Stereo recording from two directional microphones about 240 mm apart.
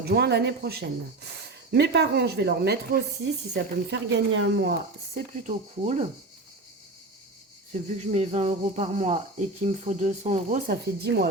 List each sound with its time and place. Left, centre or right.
0.0 s speech: right
5.5 s speech: right
7.7 s speech: right